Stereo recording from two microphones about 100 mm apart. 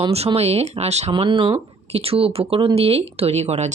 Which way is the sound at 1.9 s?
80° right.